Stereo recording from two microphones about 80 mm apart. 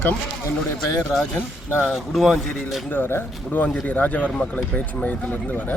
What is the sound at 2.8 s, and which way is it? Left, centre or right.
Speech, left.